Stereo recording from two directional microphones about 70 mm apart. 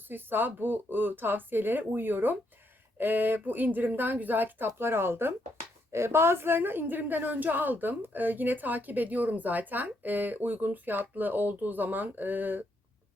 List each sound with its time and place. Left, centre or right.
0.1 s a woman's voice: right